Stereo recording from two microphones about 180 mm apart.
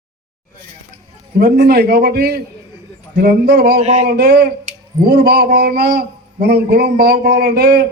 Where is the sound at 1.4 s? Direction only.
50° right (ahead or behind).